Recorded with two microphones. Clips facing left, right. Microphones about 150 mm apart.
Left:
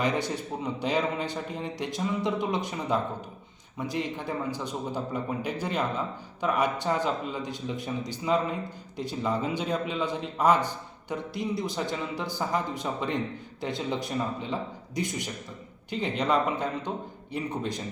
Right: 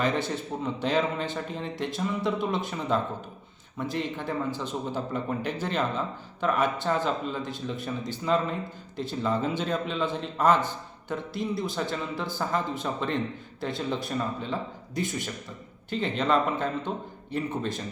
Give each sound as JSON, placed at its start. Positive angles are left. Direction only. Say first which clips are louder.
{"t": 0.0, "sound": "a man's voice", "louder": "right 1 dB", "side_deg": 15}